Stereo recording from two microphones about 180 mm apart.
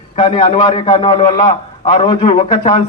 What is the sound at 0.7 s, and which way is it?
Speech, 25° left (ahead or behind).